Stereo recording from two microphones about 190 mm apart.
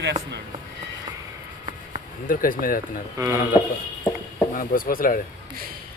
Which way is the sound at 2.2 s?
45° left (ahead or behind).